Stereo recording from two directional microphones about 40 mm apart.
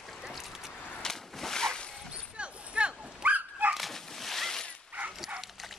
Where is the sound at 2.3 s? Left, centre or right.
Right.